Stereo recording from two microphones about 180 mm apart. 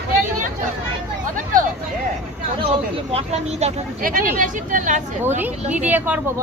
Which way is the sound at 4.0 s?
50° right (ahead or behind).